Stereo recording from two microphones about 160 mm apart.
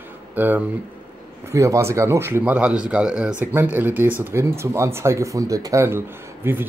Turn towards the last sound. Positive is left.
turn(degrees=-15)  # may be behind; listen again after turning